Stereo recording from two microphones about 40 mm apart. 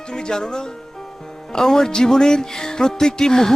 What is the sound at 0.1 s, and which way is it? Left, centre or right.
Speech, centre.